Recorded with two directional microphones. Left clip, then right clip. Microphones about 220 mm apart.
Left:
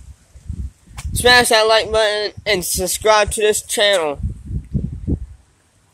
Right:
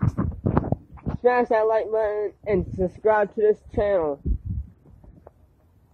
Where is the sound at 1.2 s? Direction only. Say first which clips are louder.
Left 8 dB; 25° left (ahead or behind).